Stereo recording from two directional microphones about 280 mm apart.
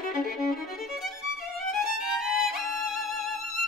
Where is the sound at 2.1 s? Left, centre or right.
Centre.